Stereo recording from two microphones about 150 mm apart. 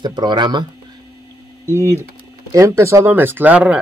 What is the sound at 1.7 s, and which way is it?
Speech, 15° right (ahead or behind).